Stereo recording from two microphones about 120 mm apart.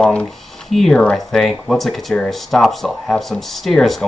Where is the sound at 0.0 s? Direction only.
5° left (ahead or behind).